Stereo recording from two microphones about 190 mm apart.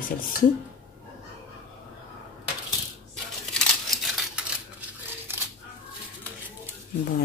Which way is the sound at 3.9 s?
Centre (ahead or behind).